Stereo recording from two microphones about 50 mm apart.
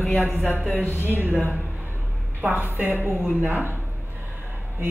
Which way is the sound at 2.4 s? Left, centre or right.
Right.